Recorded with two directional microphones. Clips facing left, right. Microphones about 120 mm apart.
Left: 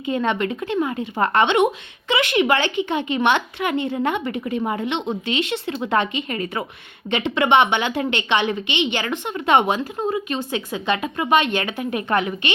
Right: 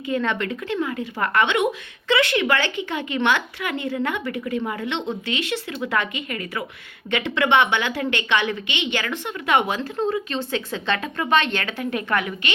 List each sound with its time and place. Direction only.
0.0 s a woman's voice: 20° left (ahead or behind)